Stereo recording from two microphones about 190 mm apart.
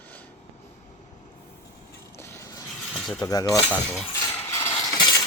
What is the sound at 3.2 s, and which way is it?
Speech, 20° left (ahead or behind).